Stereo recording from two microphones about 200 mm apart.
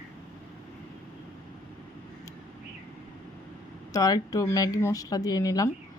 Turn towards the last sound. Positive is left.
turn(degrees=20)  # may be behind; listen again after turning